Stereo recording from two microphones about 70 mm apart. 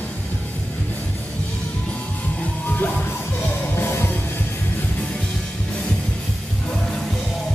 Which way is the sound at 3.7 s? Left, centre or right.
Left.